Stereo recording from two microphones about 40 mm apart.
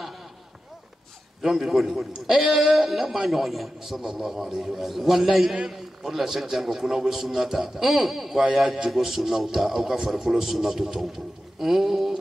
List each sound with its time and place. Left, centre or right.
1.4 s a man's voice: centre